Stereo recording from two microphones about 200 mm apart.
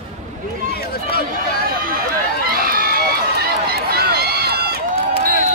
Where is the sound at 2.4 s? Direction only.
45° right (ahead or behind).